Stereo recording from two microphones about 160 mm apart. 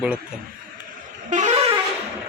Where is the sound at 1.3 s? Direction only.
45° right (ahead or behind).